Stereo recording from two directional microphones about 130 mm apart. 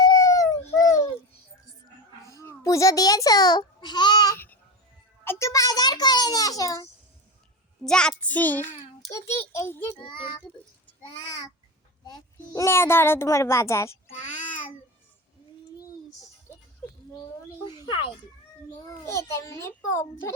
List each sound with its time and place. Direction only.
0.0 s a sound: 30° left (ahead or behind)
2.2 s a child's voice: 20° left (ahead or behind)
5.2 s a child's voice: 20° left (ahead or behind)
7.9 s child singing: 5° left (ahead or behind)
9.0 s a child's voice: 25° left (ahead or behind)
12.0 s child singing: 30° left (ahead or behind)
12.6 s a child's voice: 20° left (ahead or behind)
17.7 s a sound: 35° left (ahead or behind)
19.0 s a child's voice: 20° left (ahead or behind)